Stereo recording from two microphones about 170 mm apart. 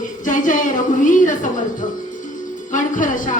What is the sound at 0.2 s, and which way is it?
A woman's voice, 50° left (ahead or behind).